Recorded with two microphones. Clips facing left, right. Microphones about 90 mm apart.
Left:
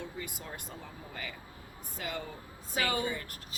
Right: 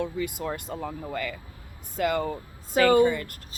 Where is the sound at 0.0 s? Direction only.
90° right.